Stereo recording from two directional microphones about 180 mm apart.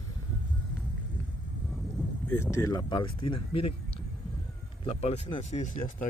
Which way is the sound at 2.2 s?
15° left (ahead or behind).